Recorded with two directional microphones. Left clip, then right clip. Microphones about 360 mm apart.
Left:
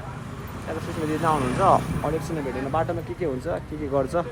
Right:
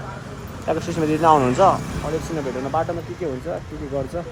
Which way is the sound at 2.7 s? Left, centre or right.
Centre.